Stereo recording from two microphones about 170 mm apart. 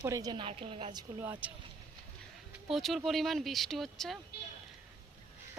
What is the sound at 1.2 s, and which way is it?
Speech, 10° right (ahead or behind).